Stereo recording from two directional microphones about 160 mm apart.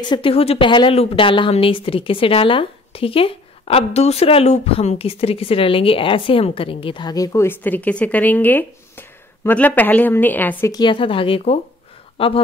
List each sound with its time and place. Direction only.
0.0 s a woman's voice: 30° left (ahead or behind); by 10.7 s 10° left (ahead or behind)
10.7 s a woman's voice: 30° left (ahead or behind)